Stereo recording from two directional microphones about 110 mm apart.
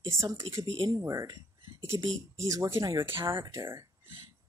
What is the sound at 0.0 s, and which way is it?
Speech, 30° right (ahead or behind).